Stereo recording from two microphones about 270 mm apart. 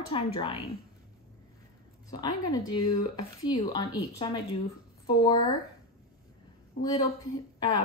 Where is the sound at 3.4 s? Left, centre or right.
Centre.